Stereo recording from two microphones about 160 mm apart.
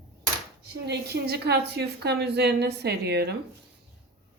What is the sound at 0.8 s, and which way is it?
A woman's voice, 90° right.